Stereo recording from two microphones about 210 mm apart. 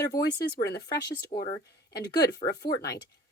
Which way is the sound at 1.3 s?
35° left (ahead or behind).